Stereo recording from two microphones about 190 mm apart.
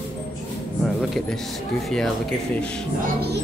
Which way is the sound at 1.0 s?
Centre (ahead or behind).